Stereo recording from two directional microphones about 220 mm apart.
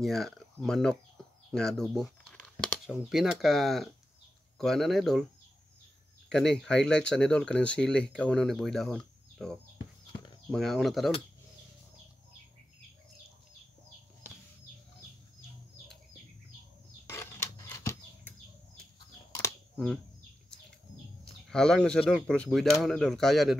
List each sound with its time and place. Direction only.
0.0 s speech: centre (ahead or behind)
6.2 s speech: centre (ahead or behind)
9.8 s horse: 20° left (ahead or behind)
10.5 s speech: centre (ahead or behind)
17.0 s a sound: 10° left (ahead or behind)
21.5 s speech: 5° left (ahead or behind)